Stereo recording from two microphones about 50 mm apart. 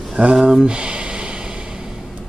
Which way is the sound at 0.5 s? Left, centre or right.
Centre.